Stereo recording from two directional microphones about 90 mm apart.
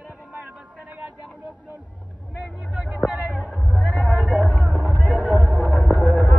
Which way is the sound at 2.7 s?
15° right (ahead or behind).